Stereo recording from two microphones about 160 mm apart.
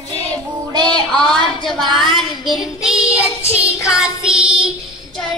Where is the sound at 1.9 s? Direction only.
Centre (ahead or behind).